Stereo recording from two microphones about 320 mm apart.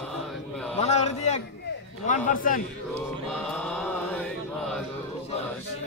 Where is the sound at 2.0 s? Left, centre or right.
Left.